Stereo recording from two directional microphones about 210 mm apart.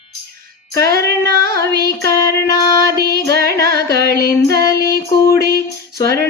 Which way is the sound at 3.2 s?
50° right (ahead or behind).